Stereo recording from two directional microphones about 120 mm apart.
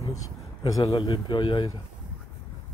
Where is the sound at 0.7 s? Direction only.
30° left (ahead or behind).